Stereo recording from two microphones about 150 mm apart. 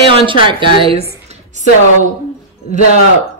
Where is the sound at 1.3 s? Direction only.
50° right (ahead or behind).